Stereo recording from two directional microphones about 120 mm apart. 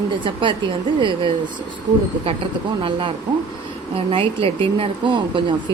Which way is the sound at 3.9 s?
50° right (ahead or behind).